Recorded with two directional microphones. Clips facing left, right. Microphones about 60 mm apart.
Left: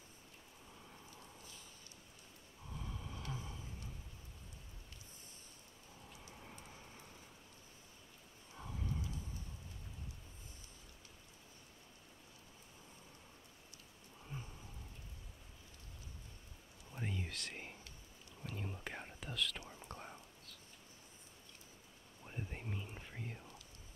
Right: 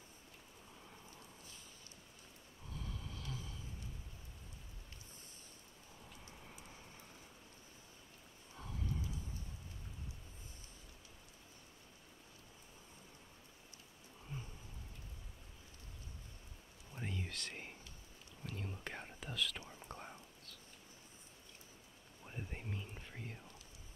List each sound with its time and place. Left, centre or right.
2.7 s a sound: centre
6.6 s vehicle: centre
8.5 s horse: centre
16.9 s whispering: centre
22.2 s whispering: centre